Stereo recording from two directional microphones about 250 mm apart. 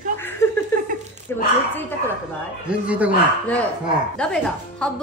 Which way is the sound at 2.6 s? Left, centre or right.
Centre.